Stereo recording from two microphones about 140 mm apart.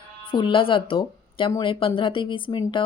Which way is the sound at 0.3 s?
35° left (ahead or behind).